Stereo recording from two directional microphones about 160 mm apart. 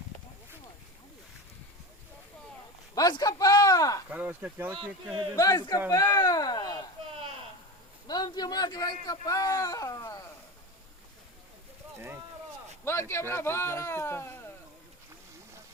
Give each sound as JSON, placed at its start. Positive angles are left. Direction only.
{"t": 2.9, "sound": "a sound", "side_deg": 25}
{"t": 4.1, "sound": "speech", "side_deg": -10}
{"t": 5.4, "sound": "a man's voice", "side_deg": 25}
{"t": 8.0, "sound": "a man's voice", "side_deg": 25}
{"t": 12.8, "sound": "speech", "side_deg": 15}